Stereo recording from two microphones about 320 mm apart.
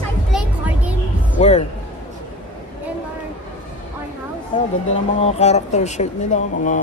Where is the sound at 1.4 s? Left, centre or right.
Left.